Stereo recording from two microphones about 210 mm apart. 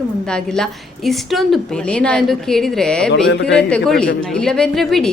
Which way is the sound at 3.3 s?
60° left (ahead or behind).